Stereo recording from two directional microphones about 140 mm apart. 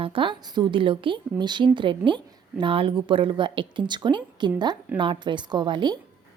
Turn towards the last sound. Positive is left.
turn(degrees=-30)  # may be behind; listen again after turning